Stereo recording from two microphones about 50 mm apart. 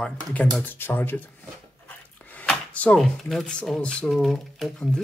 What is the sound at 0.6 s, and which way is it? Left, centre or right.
Speech, left.